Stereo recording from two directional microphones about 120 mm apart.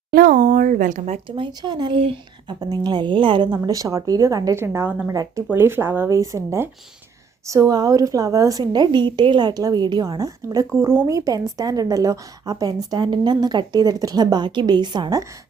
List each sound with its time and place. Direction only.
0.4 s speech: 90° right
1.1 s a woman's voice: 45° right (ahead or behind)
3.6 s a woman's voice: 30° right (ahead or behind)
5.1 s a woman's voice: 30° right (ahead or behind)